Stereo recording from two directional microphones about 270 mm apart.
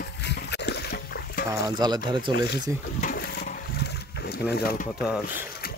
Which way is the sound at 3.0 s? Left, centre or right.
Left.